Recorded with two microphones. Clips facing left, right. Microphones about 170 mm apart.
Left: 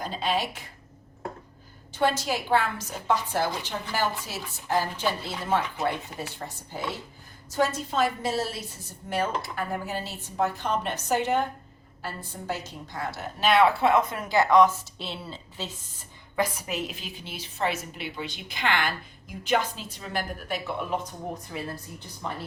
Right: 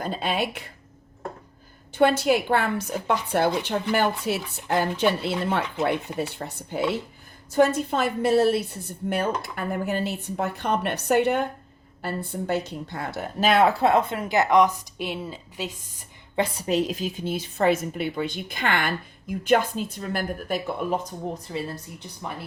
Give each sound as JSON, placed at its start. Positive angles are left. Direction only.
{"t": 0.0, "sound": "a sound", "side_deg": -55}
{"t": 1.9, "sound": "a woman's voice", "side_deg": -60}
{"t": 16.3, "sound": "a woman's voice", "side_deg": -30}
{"t": 21.5, "sound": "speech", "side_deg": -30}